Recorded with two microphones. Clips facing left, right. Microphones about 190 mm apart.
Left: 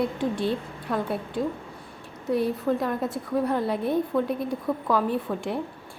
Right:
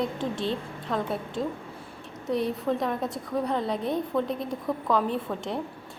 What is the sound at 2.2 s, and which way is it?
A woman's voice, centre (ahead or behind).